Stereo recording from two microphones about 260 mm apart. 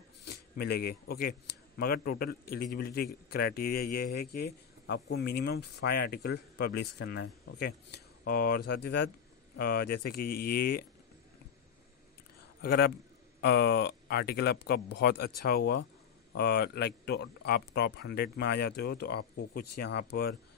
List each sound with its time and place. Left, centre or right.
0.6 s a man's voice: left
12.6 s a man's voice: left